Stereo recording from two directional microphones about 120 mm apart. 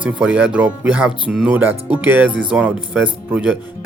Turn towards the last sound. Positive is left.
turn(degrees=-15)  # may be behind; listen again after turning